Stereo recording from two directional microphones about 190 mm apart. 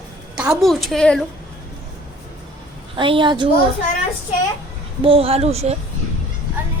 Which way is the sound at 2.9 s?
25° right (ahead or behind).